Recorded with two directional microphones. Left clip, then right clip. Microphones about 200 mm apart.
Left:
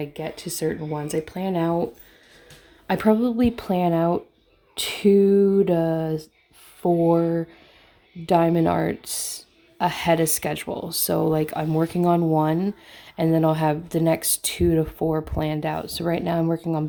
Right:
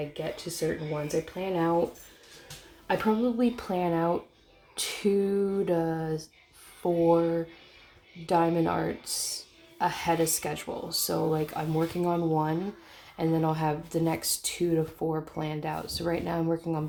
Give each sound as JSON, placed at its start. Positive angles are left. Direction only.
{"t": 0.1, "sound": "speech", "side_deg": 50}
{"t": 2.8, "sound": "speech", "side_deg": 50}